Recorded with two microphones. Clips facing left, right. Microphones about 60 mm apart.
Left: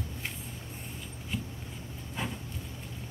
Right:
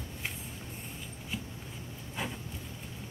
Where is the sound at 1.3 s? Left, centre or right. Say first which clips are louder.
Left 3 dB; centre.